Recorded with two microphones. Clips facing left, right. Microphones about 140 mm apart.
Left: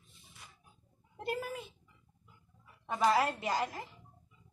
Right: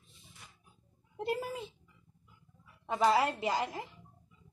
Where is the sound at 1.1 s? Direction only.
25° right (ahead or behind).